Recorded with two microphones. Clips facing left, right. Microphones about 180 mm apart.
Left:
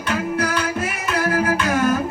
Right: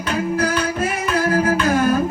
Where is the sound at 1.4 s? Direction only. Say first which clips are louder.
Right 2 dB; 35° right (ahead or behind).